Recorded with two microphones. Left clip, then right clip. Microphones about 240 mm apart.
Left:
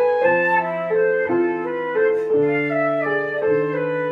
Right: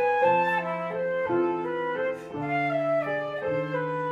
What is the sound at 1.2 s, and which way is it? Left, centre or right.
Music, centre.